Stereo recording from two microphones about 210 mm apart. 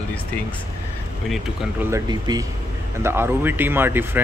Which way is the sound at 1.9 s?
20° right (ahead or behind).